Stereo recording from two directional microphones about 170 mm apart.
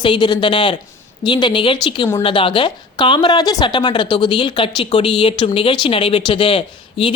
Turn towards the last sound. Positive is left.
turn(degrees=30)  # may be behind; listen again after turning